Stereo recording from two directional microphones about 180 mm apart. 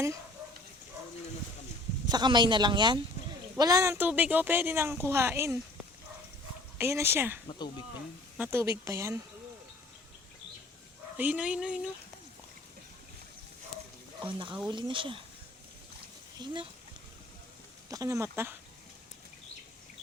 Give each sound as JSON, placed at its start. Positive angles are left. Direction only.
{"t": 2.0, "sound": "speech", "side_deg": -25}
{"t": 6.7, "sound": "speech", "side_deg": -15}
{"t": 11.2, "sound": "speech", "side_deg": -5}
{"t": 14.2, "sound": "speech", "side_deg": -25}
{"t": 16.4, "sound": "speech", "side_deg": -25}
{"t": 17.8, "sound": "speech", "side_deg": -20}